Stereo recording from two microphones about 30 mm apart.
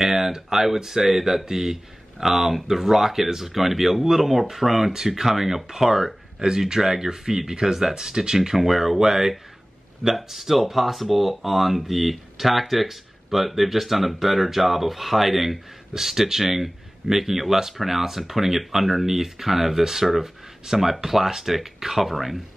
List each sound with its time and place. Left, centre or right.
0.0 s speech: centre
4.9 s speech: centre
8.4 s speech: centre